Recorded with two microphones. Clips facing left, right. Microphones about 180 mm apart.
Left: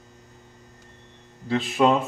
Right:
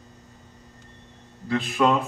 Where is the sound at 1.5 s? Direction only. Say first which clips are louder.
Left 1 dB; 25° left (ahead or behind).